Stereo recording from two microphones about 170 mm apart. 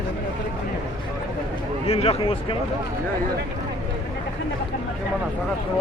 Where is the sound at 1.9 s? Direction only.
35° left (ahead or behind).